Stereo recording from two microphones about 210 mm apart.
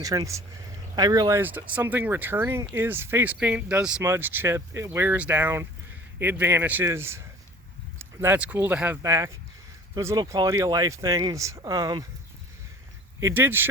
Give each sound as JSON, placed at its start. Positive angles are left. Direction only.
{"t": 0.0, "sound": "speech", "side_deg": -15}
{"t": 13.1, "sound": "speech", "side_deg": -10}